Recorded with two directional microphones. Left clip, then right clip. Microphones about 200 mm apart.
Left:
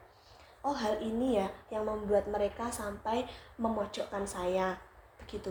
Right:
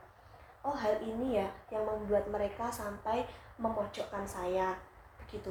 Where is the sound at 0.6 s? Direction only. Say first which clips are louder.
Left 2 dB; 50° left (ahead or behind).